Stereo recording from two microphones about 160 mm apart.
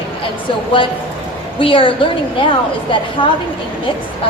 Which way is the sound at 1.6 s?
35° left (ahead or behind).